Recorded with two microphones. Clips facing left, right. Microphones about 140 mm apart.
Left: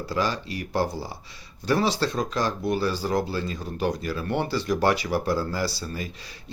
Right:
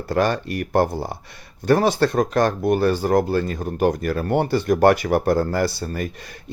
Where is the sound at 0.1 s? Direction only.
55° right (ahead or behind).